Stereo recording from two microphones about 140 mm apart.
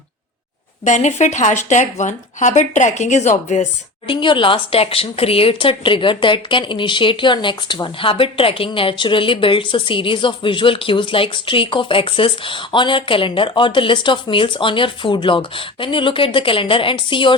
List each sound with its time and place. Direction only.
0.9 s speech: 60° left (ahead or behind)
4.0 s speech: 35° left (ahead or behind)